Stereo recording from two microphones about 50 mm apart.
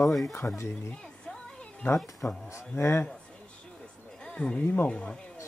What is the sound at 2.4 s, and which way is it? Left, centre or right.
Speech, left.